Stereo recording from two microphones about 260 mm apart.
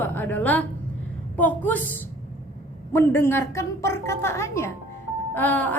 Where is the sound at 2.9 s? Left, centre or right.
Centre.